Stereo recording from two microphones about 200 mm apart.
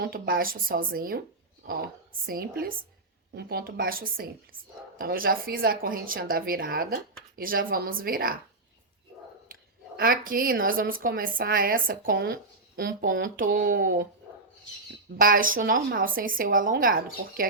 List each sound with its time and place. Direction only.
0.0 s a woman's voice: 45° right (ahead or behind)
10.0 s a woman's voice: 45° right (ahead or behind)
15.2 s a woman's voice: 45° right (ahead or behind)